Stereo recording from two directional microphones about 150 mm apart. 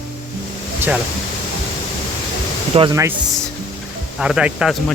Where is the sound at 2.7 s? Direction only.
40° right (ahead or behind).